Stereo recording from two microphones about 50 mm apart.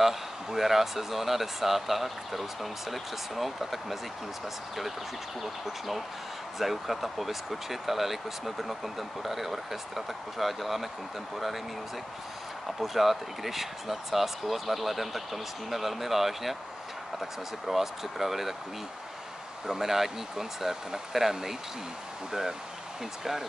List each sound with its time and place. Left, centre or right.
0.0 s speech: centre
5.4 s speech: centre
12.6 s speech: centre
19.6 s speech: centre